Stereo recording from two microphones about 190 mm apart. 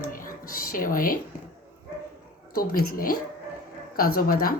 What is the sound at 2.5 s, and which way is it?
Speech, 50° left (ahead or behind).